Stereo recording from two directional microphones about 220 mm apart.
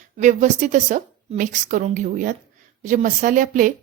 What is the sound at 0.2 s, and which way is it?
A woman's voice, 35° right (ahead or behind).